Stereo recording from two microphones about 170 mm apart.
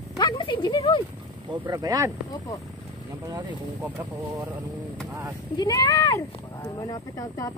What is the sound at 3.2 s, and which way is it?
Speech, 20° right (ahead or behind).